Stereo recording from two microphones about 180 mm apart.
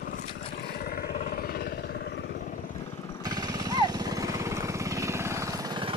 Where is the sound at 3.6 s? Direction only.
20° right (ahead or behind).